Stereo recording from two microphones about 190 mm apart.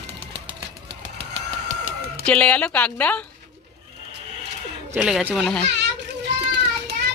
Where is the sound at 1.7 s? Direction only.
45° right (ahead or behind).